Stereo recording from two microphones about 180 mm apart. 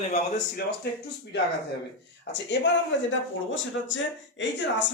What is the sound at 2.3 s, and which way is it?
A man's voice, 75° left (ahead or behind).